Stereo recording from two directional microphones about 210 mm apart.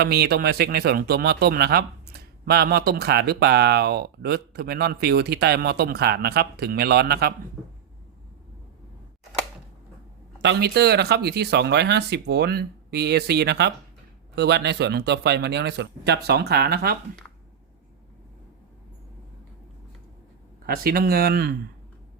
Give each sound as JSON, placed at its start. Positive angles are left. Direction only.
{"t": 0.0, "sound": "speech", "side_deg": -50}
{"t": 10.4, "sound": "speech", "side_deg": -50}
{"t": 20.7, "sound": "speech", "side_deg": -45}